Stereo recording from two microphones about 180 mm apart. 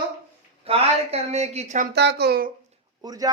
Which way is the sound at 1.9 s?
65° right (ahead or behind).